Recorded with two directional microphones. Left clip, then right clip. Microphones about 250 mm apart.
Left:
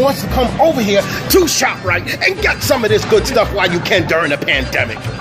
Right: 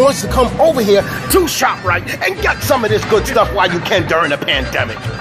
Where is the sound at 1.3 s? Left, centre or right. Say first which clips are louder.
Left 1 dB; centre.